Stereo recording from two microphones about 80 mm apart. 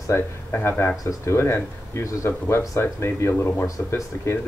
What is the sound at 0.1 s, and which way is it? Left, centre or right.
Speech, left.